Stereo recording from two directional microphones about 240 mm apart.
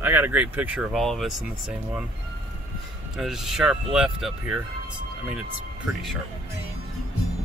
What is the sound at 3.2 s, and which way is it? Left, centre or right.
Speech, centre.